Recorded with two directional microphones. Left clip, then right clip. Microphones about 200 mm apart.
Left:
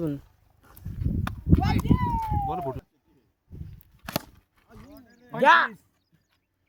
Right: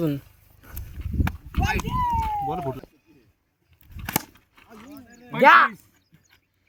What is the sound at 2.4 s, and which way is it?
Speech, 15° right (ahead or behind).